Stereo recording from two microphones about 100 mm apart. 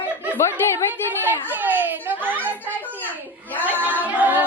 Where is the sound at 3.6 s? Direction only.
15° right (ahead or behind).